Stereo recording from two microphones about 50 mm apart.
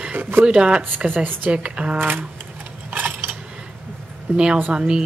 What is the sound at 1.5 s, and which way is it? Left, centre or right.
Speech, right.